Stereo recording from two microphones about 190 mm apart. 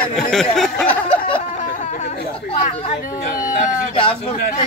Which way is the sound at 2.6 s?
35° left (ahead or behind).